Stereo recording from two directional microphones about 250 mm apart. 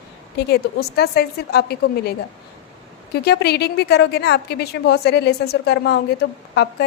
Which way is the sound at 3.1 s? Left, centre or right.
Left.